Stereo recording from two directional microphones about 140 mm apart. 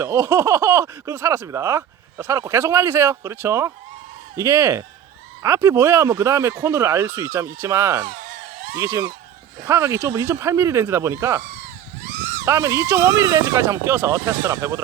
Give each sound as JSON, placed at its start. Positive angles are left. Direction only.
{"t": 0.0, "sound": "speech", "side_deg": -20}
{"t": 8.0, "sound": "a sound", "side_deg": -90}
{"t": 8.8, "sound": "speech", "side_deg": -20}